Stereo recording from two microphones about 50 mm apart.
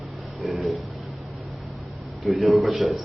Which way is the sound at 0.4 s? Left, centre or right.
Centre.